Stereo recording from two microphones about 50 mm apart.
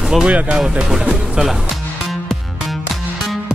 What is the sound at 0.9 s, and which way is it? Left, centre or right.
Speech, centre.